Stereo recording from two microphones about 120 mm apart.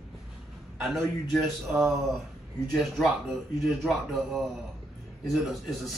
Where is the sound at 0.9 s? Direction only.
Centre (ahead or behind).